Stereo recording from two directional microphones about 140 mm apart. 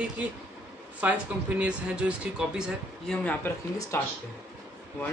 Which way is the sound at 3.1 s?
10° left (ahead or behind).